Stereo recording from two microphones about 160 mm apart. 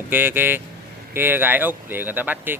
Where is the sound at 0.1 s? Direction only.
10° right (ahead or behind).